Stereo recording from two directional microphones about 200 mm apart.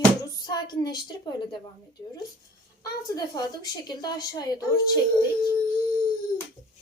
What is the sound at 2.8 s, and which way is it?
A woman's voice, 20° left (ahead or behind).